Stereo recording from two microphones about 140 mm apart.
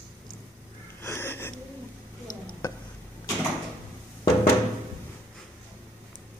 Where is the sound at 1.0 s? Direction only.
15° left (ahead or behind).